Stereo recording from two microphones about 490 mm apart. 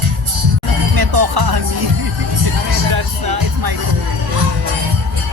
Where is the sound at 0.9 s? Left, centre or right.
Right.